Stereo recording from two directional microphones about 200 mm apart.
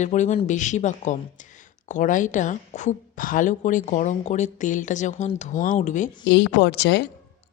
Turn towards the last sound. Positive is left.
turn(degrees=60)  # may be behind; listen again after turning